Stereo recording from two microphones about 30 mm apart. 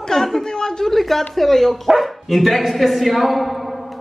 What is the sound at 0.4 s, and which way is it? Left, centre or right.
Speech, left.